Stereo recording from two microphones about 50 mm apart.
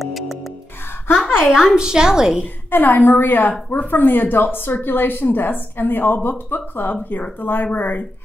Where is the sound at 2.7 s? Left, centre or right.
Left.